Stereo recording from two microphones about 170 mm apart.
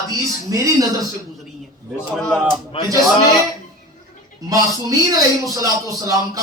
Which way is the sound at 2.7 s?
30° left (ahead or behind).